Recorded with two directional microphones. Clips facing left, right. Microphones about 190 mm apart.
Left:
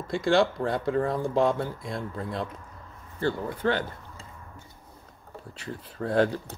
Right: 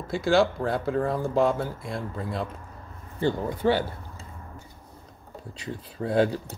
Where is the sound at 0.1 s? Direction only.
5° right (ahead or behind).